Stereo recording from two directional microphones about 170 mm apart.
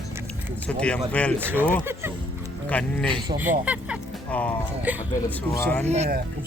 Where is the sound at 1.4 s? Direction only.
10° right (ahead or behind).